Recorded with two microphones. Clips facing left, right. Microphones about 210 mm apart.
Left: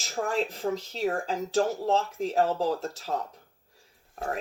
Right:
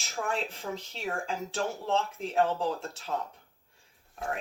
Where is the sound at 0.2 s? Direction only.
35° left (ahead or behind).